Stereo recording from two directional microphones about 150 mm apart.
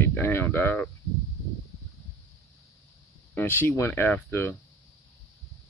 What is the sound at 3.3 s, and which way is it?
Speech, 15° left (ahead or behind).